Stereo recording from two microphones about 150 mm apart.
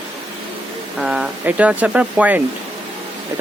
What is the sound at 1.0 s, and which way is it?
Speech, 5° right (ahead or behind).